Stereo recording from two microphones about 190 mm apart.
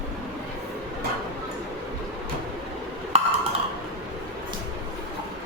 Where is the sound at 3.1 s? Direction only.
30° right (ahead or behind).